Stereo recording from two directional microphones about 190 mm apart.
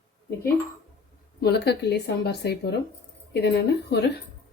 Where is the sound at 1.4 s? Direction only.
60° left (ahead or behind).